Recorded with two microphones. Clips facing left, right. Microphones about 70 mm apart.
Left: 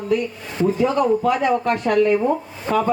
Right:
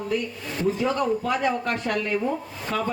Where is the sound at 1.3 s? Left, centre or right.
Left.